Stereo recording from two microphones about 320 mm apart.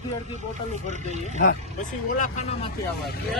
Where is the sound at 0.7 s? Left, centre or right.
Right.